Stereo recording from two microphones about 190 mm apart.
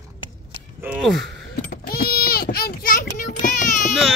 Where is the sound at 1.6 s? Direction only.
50° left (ahead or behind).